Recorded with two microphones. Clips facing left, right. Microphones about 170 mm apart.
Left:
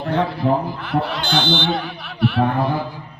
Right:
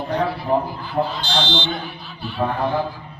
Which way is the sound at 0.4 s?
70° left (ahead or behind).